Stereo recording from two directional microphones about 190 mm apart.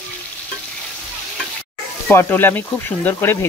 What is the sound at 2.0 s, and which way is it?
Speech, 10° left (ahead or behind).